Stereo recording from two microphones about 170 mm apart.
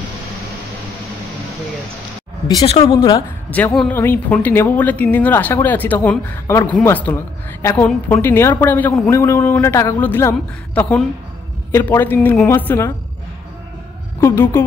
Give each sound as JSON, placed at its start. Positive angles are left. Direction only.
{"t": 2.6, "sound": "speech", "side_deg": 35}
{"t": 3.4, "sound": "speech", "side_deg": 10}
{"t": 14.2, "sound": "speech", "side_deg": 15}